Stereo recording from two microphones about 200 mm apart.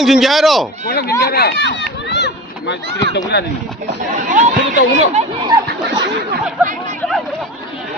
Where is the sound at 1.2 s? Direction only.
50° left (ahead or behind).